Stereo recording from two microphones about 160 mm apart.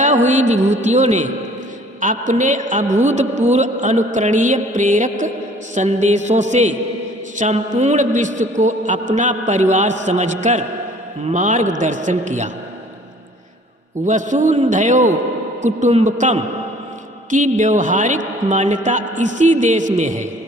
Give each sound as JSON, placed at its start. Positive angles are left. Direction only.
{"t": 0.3, "sound": "a woman's voice", "side_deg": -45}
{"t": 14.0, "sound": "a woman's voice", "side_deg": -50}